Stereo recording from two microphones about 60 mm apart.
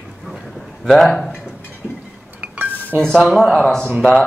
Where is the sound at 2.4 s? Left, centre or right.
Right.